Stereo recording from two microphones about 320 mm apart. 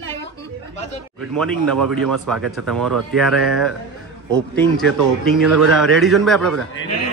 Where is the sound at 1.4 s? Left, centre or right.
Centre.